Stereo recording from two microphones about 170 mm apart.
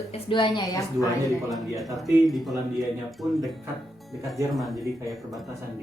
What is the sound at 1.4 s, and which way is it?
Speech, centre (ahead or behind).